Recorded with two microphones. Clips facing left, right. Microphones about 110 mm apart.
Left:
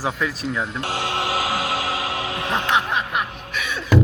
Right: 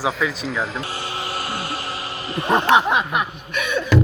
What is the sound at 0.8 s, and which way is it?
Music, 90° left.